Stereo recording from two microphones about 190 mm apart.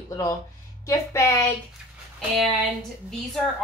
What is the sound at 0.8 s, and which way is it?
Speech, 15° left (ahead or behind).